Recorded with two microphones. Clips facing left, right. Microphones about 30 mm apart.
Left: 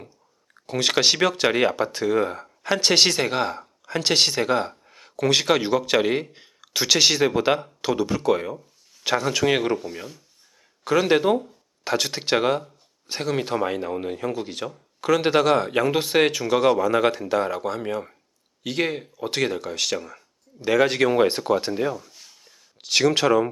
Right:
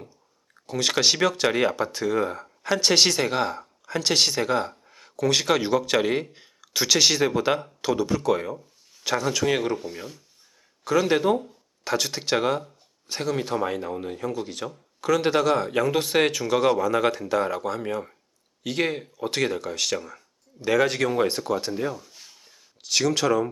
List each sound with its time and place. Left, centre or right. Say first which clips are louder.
0.7 s speech: left 2 dB; centre
9.7 s speech: left 3 dB; centre
10.8 s speech: left 2 dB; centre
22.8 s speech: left 4 dB; centre